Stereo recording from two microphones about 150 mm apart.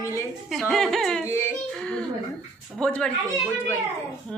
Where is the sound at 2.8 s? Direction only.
5° left (ahead or behind).